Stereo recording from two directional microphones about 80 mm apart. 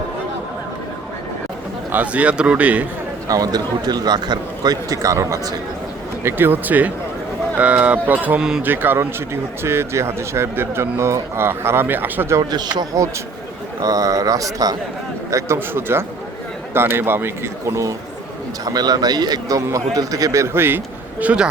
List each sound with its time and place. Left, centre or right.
1.9 s a man's voice: centre
3.2 s speech: right
6.2 s a man's voice: right
8.4 s a man's voice: centre
8.6 s speech: right
12.4 s a man's voice: right
15.5 s a man's voice: right
18.6 s speech: right; by 21.4 s centre